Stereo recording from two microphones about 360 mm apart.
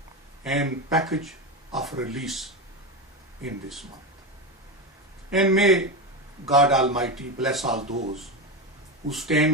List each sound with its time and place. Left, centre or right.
0.4 s a man's voice: centre
5.3 s a man's voice: centre
7.8 s speech: centre
9.0 s a man's voice: centre